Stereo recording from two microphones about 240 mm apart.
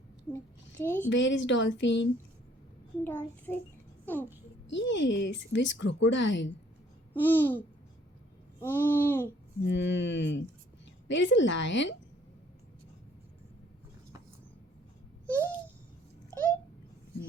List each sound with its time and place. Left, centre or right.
0.3 s babbling: centre
1.1 s speech: left
3.0 s babbling: centre
4.0 s speech: centre
4.7 s speech: left
7.1 s babbling: centre
8.6 s babbling: centre
9.6 s speech: left
16.3 s a sound: centre